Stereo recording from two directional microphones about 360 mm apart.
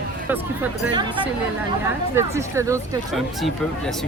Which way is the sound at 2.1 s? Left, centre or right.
Centre.